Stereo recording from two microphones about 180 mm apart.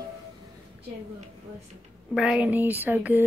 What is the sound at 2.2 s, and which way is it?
A woman's voice, 5° right (ahead or behind).